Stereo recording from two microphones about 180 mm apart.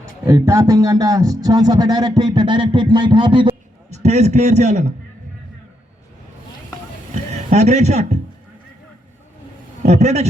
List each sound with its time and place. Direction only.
0.3 s speech: 15° right (ahead or behind)
3.9 s a man's voice: 40° right (ahead or behind)
7.5 s a man's voice: 40° right (ahead or behind)
9.8 s a man's voice: 40° right (ahead or behind)